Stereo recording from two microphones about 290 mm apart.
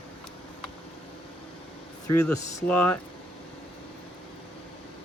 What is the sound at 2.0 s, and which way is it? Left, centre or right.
Speech, centre.